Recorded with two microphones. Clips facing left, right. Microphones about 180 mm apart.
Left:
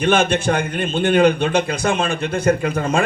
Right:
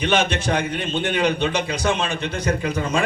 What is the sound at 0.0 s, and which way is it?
A man's voice, 50° left (ahead or behind).